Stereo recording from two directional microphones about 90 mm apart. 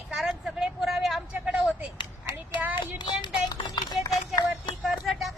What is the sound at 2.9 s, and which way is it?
Music, 60° left (ahead or behind).